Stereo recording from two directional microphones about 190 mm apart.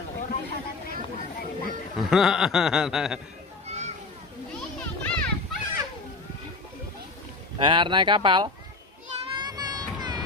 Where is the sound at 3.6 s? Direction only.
35° right (ahead or behind).